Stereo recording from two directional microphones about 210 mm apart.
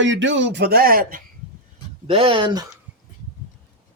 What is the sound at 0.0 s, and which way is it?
Speech, 60° right (ahead or behind).